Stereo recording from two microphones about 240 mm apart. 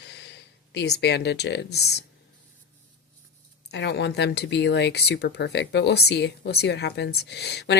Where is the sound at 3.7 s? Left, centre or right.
Left.